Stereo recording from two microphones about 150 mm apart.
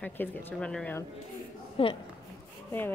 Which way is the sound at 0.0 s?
15° left (ahead or behind).